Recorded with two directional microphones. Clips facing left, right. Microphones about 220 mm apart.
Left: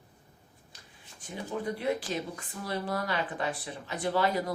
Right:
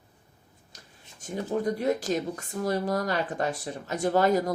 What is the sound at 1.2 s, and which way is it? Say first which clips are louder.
Speech: right 7 dB; 45° right (ahead or behind).